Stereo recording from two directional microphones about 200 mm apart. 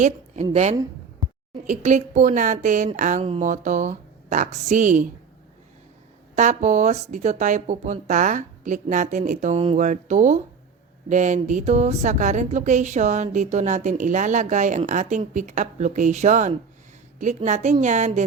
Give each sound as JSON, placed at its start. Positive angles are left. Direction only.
{"t": 0.5, "sound": "speech", "side_deg": -35}
{"t": 6.3, "sound": "speech", "side_deg": -35}